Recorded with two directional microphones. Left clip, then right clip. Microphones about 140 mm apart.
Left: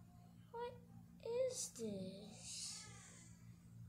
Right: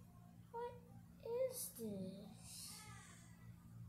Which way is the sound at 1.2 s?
45° left (ahead or behind).